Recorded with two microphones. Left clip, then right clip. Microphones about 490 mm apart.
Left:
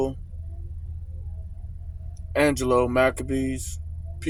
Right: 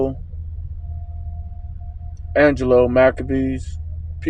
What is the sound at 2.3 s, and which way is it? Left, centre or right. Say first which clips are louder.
Speech: right 7 dB; left.